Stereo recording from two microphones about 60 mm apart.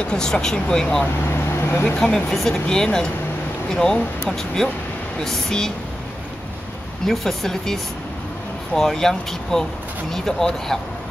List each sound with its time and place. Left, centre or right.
0.0 s speech: centre
1.3 s vehicle: left
2.0 s speech: centre
7.1 s speech: centre